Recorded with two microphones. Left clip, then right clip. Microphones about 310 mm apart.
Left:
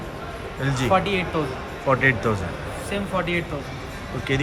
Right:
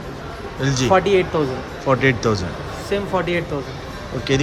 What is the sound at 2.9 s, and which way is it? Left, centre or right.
Speech, right.